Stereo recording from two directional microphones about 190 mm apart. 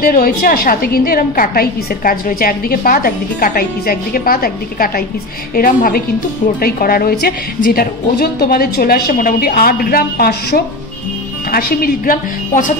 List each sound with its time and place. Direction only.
0.0 s a woman's voice: 50° left (ahead or behind)